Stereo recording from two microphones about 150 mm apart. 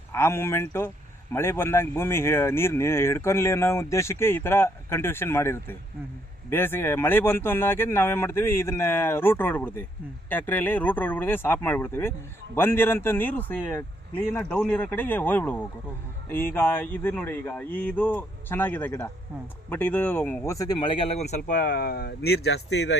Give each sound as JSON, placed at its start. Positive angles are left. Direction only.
{"t": 0.1, "sound": "speech", "side_deg": 15}
{"t": 21.4, "sound": "speech", "side_deg": 75}